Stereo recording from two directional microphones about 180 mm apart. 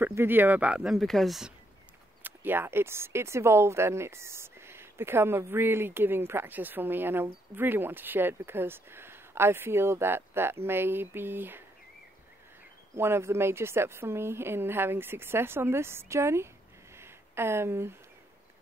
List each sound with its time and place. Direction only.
0.0 s speech: 10° right (ahead or behind)
2.2 s speech: 10° right (ahead or behind)
12.9 s speech: 15° right (ahead or behind)
16.9 s a sound: 15° right (ahead or behind)